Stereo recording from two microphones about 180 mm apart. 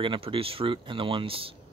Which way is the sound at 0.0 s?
30° right (ahead or behind).